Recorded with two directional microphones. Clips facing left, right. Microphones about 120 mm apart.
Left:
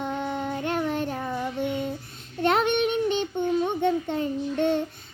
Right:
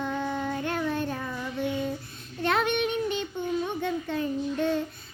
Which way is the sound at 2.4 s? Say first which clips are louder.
Left 3 dB; 25° left (ahead or behind).